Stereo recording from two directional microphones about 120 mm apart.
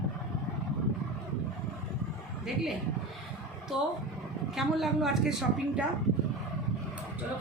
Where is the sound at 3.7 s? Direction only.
5° right (ahead or behind).